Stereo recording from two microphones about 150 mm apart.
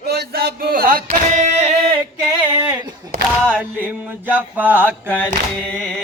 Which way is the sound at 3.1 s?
90° right.